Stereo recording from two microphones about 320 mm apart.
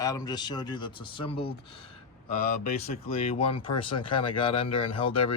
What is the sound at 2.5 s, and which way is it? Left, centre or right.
Speech, left.